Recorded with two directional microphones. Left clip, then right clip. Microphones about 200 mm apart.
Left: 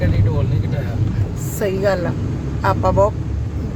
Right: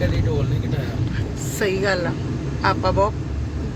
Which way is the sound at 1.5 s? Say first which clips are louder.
Left 2 dB; 10° left (ahead or behind).